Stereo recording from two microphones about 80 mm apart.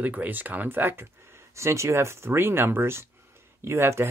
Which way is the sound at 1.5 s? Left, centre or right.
Right.